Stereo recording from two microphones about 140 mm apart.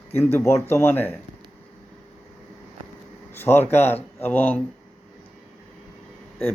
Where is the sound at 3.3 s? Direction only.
15° left (ahead or behind).